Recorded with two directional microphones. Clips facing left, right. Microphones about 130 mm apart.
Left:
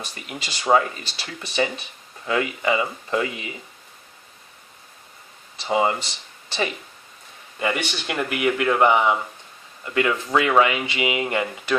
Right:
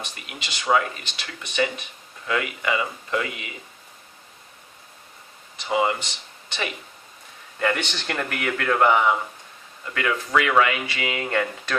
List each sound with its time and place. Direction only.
0.0 s speech: 35° left (ahead or behind)
5.5 s speech: 30° left (ahead or behind)
7.6 s speech: 10° left (ahead or behind)